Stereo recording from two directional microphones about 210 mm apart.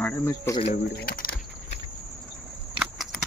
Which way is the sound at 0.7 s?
45° left (ahead or behind).